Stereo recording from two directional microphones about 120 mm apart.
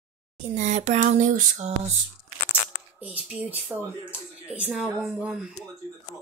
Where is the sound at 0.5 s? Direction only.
75° right (ahead or behind).